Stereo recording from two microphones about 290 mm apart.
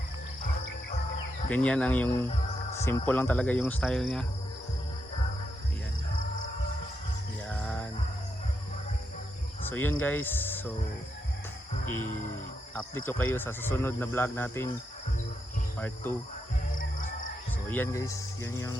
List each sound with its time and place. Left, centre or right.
1.5 s speech: centre
7.5 s music: centre
9.6 s speech: centre
12.7 s speech: centre
16.7 s music: left
17.7 s speech: centre